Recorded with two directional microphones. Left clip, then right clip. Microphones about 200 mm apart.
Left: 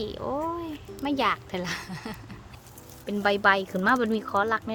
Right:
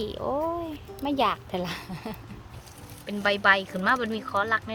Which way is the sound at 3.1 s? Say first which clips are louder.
Even; 60° left (ahead or behind).